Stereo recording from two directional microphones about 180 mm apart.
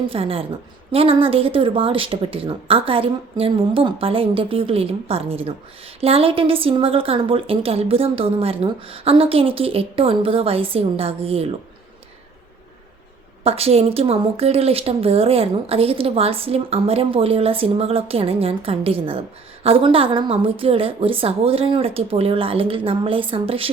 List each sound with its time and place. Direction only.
0.1 s speech: 30° right (ahead or behind)
13.4 s speech: 35° right (ahead or behind)